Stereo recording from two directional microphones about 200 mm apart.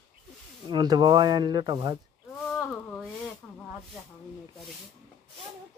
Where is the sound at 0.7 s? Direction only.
20° right (ahead or behind).